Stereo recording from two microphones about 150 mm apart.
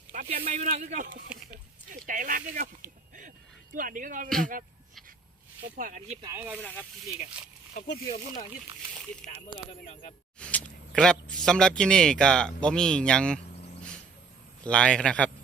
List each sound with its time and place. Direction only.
0.1 s a sound: 60° right (ahead or behind)
0.4 s speech: 50° right (ahead or behind)
3.8 s speech: 65° right (ahead or behind)
5.7 s speech: 60° right (ahead or behind)
6.2 s speech: 15° right (ahead or behind)
6.6 s a man's voice: 10° left (ahead or behind)
10.4 s a sound: 5° left (ahead or behind)
11.4 s speech: 5° left (ahead or behind)
14.6 s a man's voice: 5° left (ahead or behind)